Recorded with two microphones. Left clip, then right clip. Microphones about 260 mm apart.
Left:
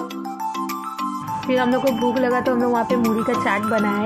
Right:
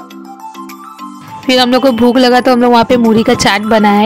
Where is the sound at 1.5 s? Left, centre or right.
Right.